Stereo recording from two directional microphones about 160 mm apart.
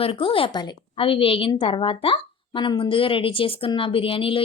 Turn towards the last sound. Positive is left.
turn(degrees=35)  # may be behind; listen again after turning